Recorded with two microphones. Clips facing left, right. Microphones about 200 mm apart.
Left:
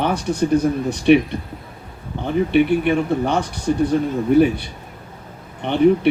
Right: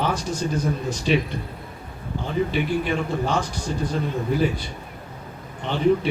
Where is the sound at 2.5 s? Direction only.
65° left (ahead or behind).